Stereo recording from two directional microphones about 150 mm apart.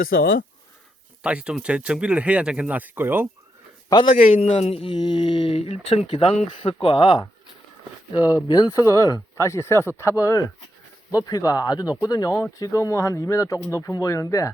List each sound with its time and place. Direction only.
0.0 s speech: 75° left (ahead or behind)
1.2 s speech: 5° right (ahead or behind)
4.1 s a man's voice: 60° left (ahead or behind)
4.4 s speech: 45° left (ahead or behind); by 14.5 s 20° left (ahead or behind)